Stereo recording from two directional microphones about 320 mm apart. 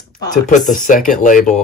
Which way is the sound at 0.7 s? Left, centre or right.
Left.